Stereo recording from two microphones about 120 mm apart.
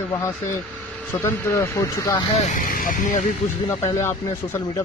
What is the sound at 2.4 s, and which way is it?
Speech, 90° left.